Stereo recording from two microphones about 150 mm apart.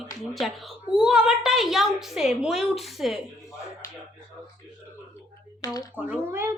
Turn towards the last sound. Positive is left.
turn(degrees=-15)  # may be behind; listen again after turning